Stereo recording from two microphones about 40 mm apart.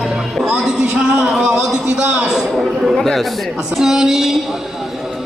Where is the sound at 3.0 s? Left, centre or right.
Centre.